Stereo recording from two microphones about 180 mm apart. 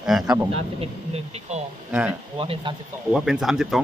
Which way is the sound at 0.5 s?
35° right (ahead or behind).